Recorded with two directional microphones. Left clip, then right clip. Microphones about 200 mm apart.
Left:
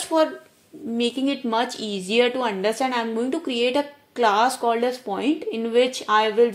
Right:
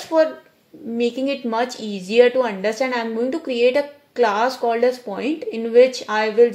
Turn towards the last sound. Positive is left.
turn(degrees=30)  # may be behind; listen again after turning